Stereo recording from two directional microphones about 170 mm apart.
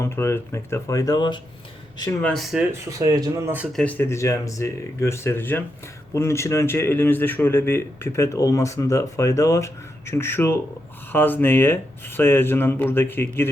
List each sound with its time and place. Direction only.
0.0 s speech: 15° left (ahead or behind)
2.2 s speech: centre (ahead or behind)
3.0 s speech: 20° right (ahead or behind)
3.7 s speech: 5° left (ahead or behind)